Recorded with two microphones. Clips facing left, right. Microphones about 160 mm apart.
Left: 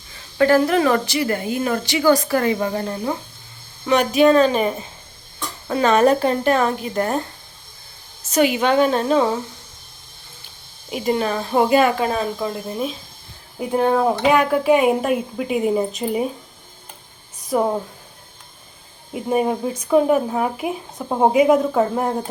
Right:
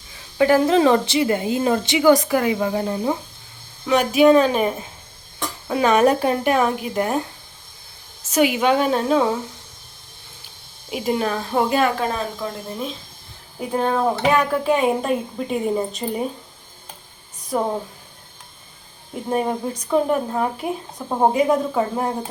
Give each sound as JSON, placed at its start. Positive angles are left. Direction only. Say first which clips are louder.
{"t": 0.3, "sound": "a woman's voice", "louder": "even", "side_deg": -15}
{"t": 2.8, "sound": "speech", "louder": "right 2 dB", "side_deg": -15}
{"t": 3.8, "sound": "speech", "louder": "even", "side_deg": -5}
{"t": 8.3, "sound": "speech", "louder": "even", "side_deg": -5}
{"t": 10.9, "sound": "speech", "louder": "left 1 dB", "side_deg": 0}
{"t": 17.5, "sound": "speech", "louder": "left 3 dB", "side_deg": 5}
{"t": 19.1, "sound": "speech", "louder": "left 3 dB", "side_deg": 5}